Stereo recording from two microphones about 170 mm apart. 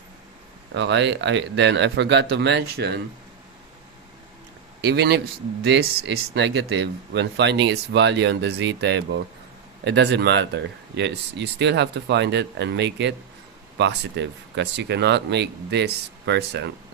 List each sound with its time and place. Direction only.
0.7 s speech: 90° right
4.8 s speech: 75° right (ahead or behind)